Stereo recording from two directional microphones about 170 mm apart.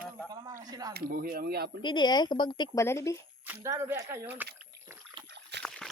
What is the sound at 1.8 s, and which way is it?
Speech, 25° left (ahead or behind).